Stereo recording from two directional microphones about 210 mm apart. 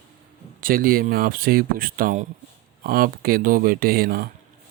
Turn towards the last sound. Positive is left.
turn(degrees=-45)  # may be behind; listen again after turning